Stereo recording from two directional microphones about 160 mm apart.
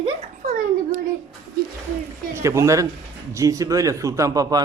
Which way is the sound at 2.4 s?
15° right (ahead or behind).